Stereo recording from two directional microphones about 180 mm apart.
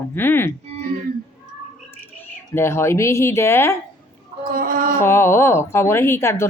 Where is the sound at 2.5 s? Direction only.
15° left (ahead or behind).